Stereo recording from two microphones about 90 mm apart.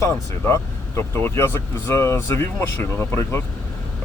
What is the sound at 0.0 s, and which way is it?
Speech, 35° left (ahead or behind).